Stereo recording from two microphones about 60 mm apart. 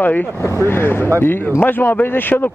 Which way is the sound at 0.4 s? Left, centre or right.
Left.